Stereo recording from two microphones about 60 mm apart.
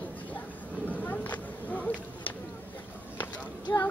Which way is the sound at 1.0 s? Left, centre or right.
Left.